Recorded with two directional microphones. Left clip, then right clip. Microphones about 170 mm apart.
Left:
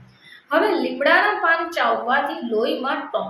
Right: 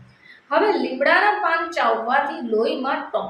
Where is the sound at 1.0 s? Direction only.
10° left (ahead or behind).